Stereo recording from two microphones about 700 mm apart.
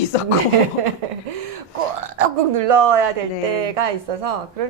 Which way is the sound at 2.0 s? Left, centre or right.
Right.